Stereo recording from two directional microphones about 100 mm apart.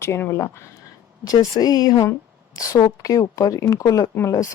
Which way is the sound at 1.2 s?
40° left (ahead or behind).